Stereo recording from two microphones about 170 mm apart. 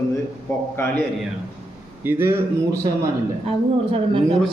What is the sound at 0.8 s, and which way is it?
Speech, 15° left (ahead or behind).